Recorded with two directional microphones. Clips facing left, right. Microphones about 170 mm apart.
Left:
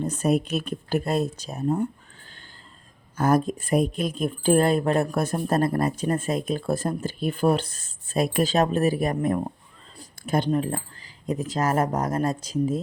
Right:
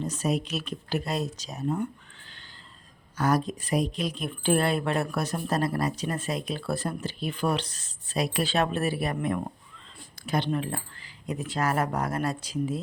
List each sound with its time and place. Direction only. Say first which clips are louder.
0.0 s speech: left 5 dB; 55° left (ahead or behind)
1.6 s speech: left 4 dB; 35° left (ahead or behind)
3.2 s speech: left 4 dB; 50° left (ahead or behind)